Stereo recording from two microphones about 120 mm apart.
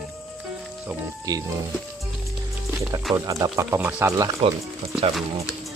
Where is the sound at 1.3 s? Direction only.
30° right (ahead or behind).